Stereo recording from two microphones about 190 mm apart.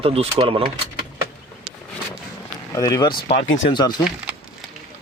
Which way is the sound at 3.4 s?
75° left (ahead or behind).